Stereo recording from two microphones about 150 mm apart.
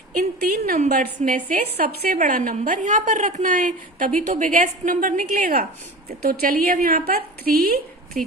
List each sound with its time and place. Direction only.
0.5 s a woman's voice: 90° right
0.9 s a woman's voice: 60° right (ahead or behind)
1.5 s a woman's voice: 85° right
2.2 s a woman's voice: 65° right (ahead or behind); by 7.8 s 80° right
8.1 s speech: 65° right (ahead or behind)